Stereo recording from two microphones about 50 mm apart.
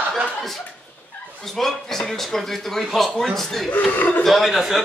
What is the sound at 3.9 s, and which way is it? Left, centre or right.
Speech, left.